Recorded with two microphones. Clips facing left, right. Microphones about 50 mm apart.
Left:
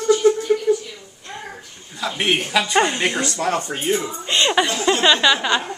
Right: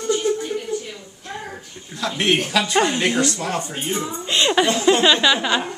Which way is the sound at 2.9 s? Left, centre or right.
Centre.